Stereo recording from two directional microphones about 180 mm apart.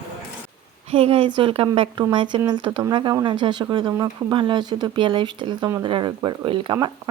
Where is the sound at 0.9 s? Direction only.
30° right (ahead or behind).